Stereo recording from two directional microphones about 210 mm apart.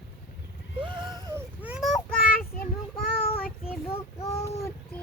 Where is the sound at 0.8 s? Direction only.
20° right (ahead or behind).